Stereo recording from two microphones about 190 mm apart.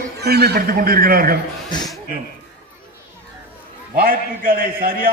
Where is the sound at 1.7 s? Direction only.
20° left (ahead or behind).